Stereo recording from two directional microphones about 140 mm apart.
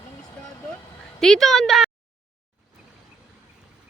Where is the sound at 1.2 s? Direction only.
5° left (ahead or behind).